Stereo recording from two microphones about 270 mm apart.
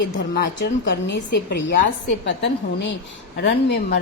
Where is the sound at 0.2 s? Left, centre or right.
Left.